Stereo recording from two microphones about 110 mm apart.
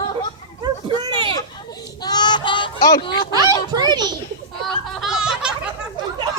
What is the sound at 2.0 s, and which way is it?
Child singing, 40° left (ahead or behind).